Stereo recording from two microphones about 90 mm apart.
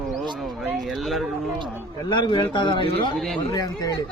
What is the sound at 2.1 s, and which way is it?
Speech, 60° left (ahead or behind).